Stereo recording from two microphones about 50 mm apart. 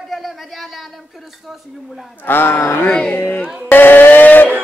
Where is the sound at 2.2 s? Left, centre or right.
Left.